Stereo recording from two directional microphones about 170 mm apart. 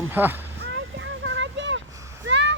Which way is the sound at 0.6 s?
90° right.